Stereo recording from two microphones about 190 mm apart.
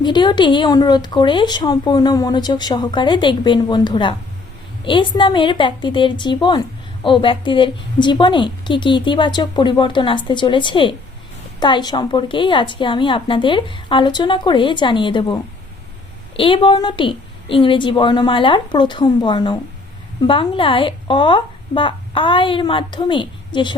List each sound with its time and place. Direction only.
0.0 s a woman's voice: 25° left (ahead or behind)